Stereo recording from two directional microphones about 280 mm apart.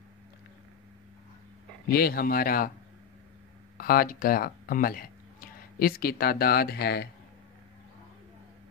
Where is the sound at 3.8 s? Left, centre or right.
Left.